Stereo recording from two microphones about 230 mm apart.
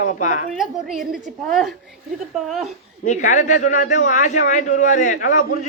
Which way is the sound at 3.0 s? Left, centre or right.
Left.